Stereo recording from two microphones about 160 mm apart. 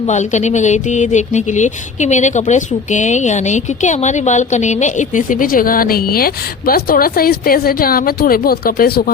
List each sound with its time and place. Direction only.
0.0 s speech: 50° left (ahead or behind); by 9.1 s 70° left (ahead or behind)